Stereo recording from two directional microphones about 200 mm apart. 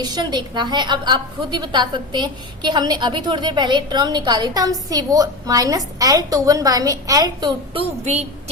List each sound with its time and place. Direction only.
0.0 s a woman's voice: 20° right (ahead or behind)